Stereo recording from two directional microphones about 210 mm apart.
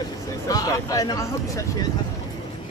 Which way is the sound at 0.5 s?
15° left (ahead or behind).